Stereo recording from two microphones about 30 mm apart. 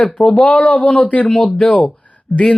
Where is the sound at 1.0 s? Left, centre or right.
Left.